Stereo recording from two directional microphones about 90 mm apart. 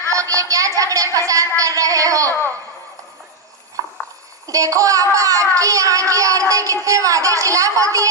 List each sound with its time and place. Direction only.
0.1 s a sound: 40° right (ahead or behind)
1.5 s speech: 40° right (ahead or behind)
2.3 s speech: 25° left (ahead or behind)
4.4 s a child's voice: 40° right (ahead or behind)